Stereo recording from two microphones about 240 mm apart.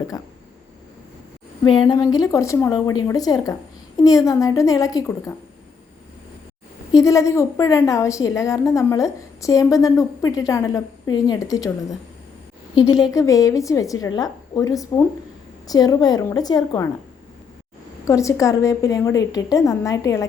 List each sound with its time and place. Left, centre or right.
1.8 s a woman's voice: centre
6.9 s a woman's voice: centre
18.0 s a woman's voice: centre